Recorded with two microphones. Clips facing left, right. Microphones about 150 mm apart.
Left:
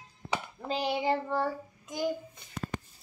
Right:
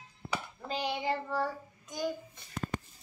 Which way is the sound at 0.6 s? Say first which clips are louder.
Left 4 dB; 30° left (ahead or behind).